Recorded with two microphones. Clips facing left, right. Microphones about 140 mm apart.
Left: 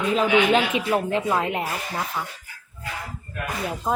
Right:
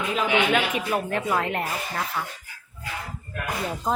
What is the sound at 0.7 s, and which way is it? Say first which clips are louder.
Speech: left 3 dB; 25° left (ahead or behind).